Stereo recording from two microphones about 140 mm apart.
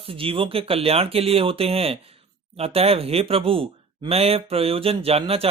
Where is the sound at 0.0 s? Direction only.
40° right (ahead or behind).